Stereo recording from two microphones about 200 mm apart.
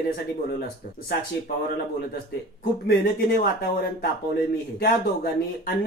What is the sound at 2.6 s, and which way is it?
Speech, 50° left (ahead or behind).